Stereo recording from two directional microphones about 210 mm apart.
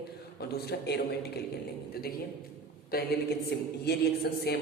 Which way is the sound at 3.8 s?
50° left (ahead or behind).